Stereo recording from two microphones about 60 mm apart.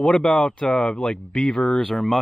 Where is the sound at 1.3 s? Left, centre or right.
Centre.